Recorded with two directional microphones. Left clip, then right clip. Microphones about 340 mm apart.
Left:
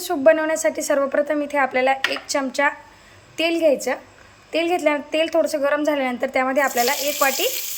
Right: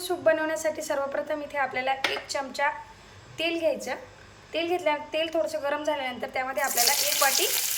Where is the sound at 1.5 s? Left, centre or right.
Centre.